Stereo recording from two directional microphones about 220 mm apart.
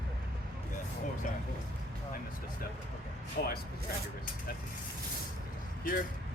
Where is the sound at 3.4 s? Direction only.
50° left (ahead or behind).